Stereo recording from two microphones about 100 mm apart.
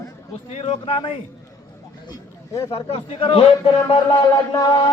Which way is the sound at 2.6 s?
70° left (ahead or behind).